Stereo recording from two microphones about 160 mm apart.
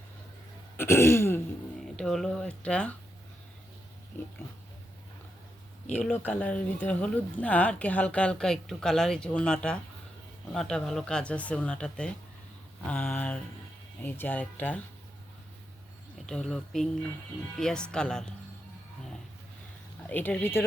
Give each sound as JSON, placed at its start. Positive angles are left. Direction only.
{"t": 0.8, "sound": "throat clearing", "side_deg": 15}
{"t": 2.0, "sound": "speech", "side_deg": 5}
{"t": 4.1, "sound": "speech", "side_deg": 15}
{"t": 6.4, "sound": "speech", "side_deg": 10}
{"t": 16.1, "sound": "speech", "side_deg": 0}
{"t": 20.1, "sound": "speech", "side_deg": 10}